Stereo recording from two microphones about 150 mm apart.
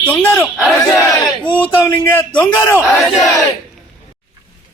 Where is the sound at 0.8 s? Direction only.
25° left (ahead or behind).